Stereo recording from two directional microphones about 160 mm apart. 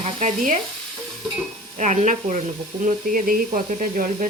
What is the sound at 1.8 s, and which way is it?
Speech, 50° right (ahead or behind).